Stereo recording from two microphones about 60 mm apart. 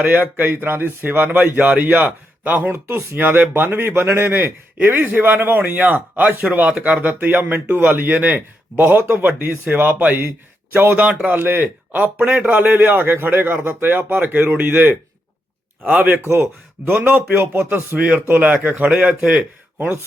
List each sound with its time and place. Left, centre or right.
0.1 s speech: right
4.8 s speech: right
16.2 s speech: right
17.3 s a sound: right
18.1 s speech: right
18.9 s speech: centre
19.8 s speech: right